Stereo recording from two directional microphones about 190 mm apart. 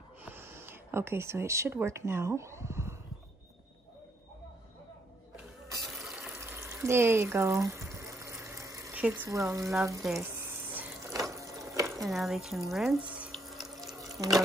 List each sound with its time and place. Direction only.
0.2 s speech: 10° right (ahead or behind)
5.9 s water tap: centre (ahead or behind)
6.7 s water: 15° right (ahead or behind)
9.0 s speech: 10° right (ahead or behind)
10.4 s a sound: 10° right (ahead or behind)
11.9 s speech: centre (ahead or behind)
13.1 s water: 5° right (ahead or behind)
14.2 s speech: centre (ahead or behind)